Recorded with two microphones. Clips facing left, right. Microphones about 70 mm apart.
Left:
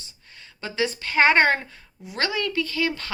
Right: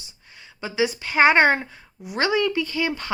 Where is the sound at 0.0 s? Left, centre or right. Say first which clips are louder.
Right 1 dB; centre.